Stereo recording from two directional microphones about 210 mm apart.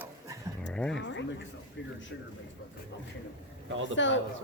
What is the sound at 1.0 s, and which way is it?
Speech, 60° left (ahead or behind).